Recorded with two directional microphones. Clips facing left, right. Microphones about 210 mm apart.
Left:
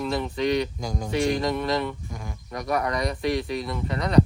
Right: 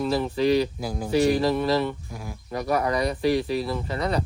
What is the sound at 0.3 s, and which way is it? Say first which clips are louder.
Speech: right 3 dB; 30° right (ahead or behind).